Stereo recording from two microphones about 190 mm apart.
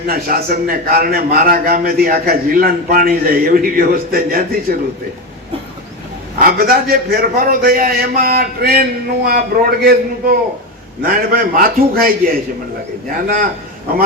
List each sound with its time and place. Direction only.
0.1 s a man's voice: 50° right (ahead or behind)
6.4 s a man's voice: 50° right (ahead or behind)
13.2 s a man's voice: 50° right (ahead or behind)